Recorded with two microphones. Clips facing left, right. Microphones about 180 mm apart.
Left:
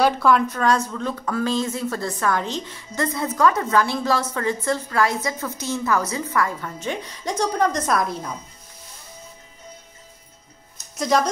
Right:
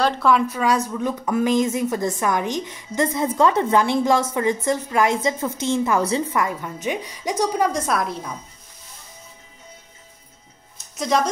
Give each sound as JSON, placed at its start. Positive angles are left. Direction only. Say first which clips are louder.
{"t": 0.0, "sound": "a woman's voice", "louder": "left 1 dB", "side_deg": 0}
{"t": 11.0, "sound": "speech", "louder": "left 1 dB", "side_deg": 0}